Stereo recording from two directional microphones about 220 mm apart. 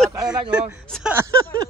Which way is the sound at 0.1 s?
15° right (ahead or behind).